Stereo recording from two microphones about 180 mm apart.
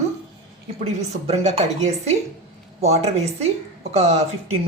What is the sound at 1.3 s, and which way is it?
A woman's voice, 35° right (ahead or behind).